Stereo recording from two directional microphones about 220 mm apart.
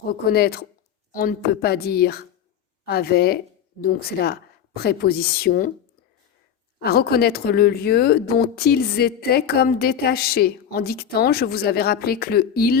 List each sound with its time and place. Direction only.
0.1 s a woman's voice: 45° left (ahead or behind)
6.7 s speech: 45° left (ahead or behind)